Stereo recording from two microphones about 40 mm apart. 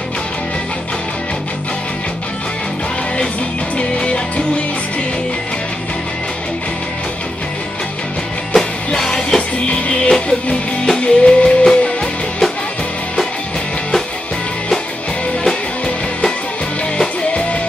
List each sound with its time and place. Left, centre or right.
3.7 s music: left
9.0 s music: centre
9.7 s music: left; by 12.4 s centre